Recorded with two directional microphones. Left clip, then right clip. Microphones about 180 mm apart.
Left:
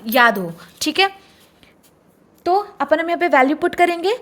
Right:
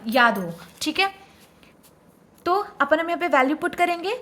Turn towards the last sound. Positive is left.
turn(degrees=30)  # may be behind; listen again after turning